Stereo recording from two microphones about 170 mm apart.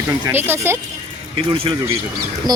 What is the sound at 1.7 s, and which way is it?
Speech, 30° right (ahead or behind).